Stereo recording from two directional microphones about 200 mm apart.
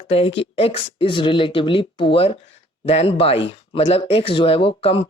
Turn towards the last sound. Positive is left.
turn(degrees=30)  # may be behind; listen again after turning